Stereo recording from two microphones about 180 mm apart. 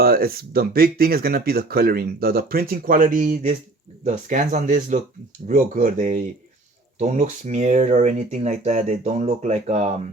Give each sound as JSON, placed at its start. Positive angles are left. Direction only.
{"t": 0.0, "sound": "speech", "side_deg": -55}